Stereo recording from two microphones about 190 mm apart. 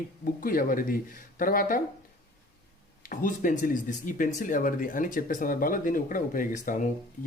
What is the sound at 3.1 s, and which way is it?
Speech, 45° left (ahead or behind).